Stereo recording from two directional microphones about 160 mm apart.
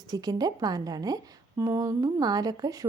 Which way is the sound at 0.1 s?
25° right (ahead or behind).